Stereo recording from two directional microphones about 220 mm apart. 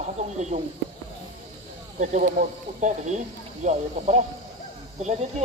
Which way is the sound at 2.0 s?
35° right (ahead or behind).